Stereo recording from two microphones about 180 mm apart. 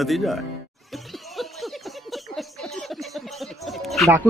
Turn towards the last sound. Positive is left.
turn(degrees=0)  # may be behind; listen again after turning